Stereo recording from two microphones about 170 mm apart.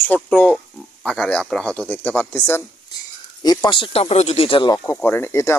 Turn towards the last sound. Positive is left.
turn(degrees=15)  # may be behind; listen again after turning